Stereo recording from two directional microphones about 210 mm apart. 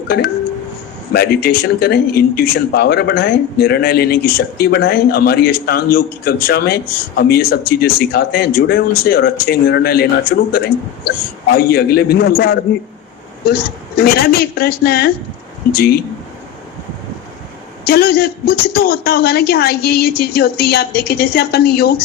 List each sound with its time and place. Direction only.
1.1 s speech: 45° left (ahead or behind)
11.5 s speech: 45° left (ahead or behind)
17.8 s speech: 45° left (ahead or behind)